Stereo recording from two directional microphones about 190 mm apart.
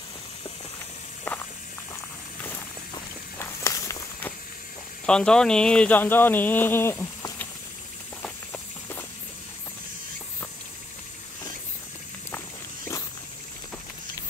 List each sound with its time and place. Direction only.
1.2 s walk: 10° left (ahead or behind)
2.9 s walk: 15° left (ahead or behind)
5.0 s speech: 5° left (ahead or behind)
8.2 s walk: 10° left (ahead or behind)